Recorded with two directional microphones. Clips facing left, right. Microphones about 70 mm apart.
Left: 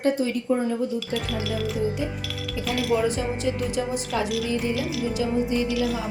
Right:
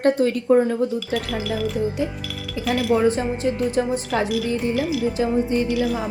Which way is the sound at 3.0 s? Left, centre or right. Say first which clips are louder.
Right 5 dB; right.